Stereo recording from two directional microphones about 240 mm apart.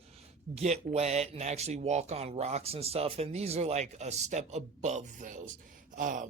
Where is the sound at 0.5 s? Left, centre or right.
Right.